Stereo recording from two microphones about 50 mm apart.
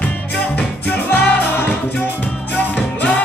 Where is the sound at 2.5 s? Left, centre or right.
Left.